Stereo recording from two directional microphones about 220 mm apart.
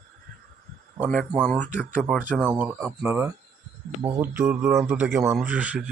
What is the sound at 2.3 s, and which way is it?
Speech, 5° right (ahead or behind).